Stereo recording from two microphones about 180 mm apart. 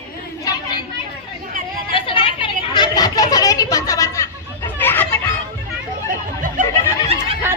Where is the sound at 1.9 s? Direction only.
30° left (ahead or behind); by 5.2 s 10° left (ahead or behind).